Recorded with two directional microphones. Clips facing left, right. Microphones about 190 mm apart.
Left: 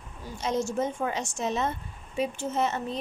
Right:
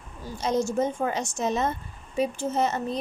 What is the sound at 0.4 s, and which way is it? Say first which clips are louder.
A woman's voice: right 3 dB; 40° right (ahead or behind).